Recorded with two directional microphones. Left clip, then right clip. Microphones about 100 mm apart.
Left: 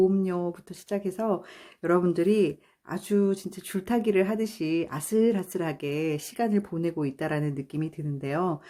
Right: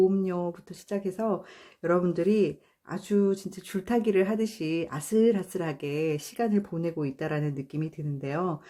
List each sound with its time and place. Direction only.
0.1 s speech: 25° left (ahead or behind)